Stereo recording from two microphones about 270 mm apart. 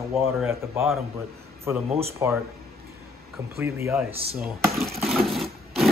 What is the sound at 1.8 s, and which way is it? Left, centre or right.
Speech, right.